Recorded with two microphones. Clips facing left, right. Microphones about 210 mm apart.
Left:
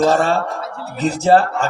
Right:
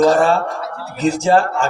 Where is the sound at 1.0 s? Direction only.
35° left (ahead or behind).